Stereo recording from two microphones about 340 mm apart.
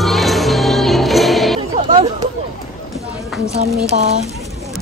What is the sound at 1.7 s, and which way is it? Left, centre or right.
Hubbub, centre.